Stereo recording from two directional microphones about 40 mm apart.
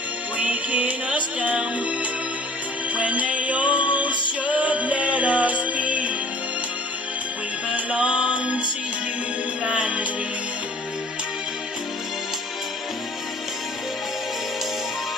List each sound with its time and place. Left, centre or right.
0.4 s music: right
2.9 s music: right
7.7 s music: right
9.7 s music: right